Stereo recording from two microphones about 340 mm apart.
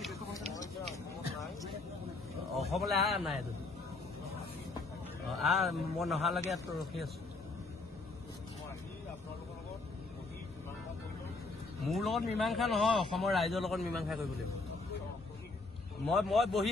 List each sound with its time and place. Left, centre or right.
2.7 s a man's voice: centre
5.4 s a man's voice: centre
11.8 s a man's voice: centre
16.1 s a man's voice: centre